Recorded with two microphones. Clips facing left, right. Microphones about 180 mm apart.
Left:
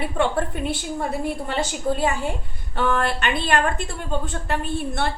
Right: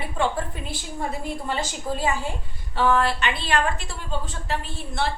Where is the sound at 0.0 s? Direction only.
60° left (ahead or behind).